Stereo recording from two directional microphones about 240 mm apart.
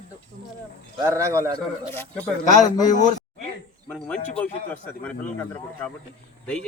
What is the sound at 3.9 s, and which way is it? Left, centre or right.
A man's voice, centre.